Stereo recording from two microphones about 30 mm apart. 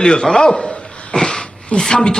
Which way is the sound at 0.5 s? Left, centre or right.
Left.